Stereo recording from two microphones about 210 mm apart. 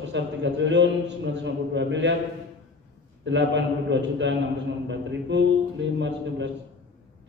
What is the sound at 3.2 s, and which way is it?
A man's voice, 60° right (ahead or behind).